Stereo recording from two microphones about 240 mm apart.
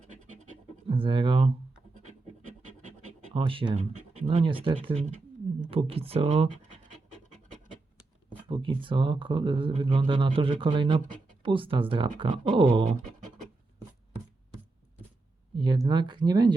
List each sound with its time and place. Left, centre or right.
0.0 s scratch: right
0.9 s speech: right
2.0 s scratch: right
3.3 s speech: right
8.4 s speech: right
15.5 s speech: centre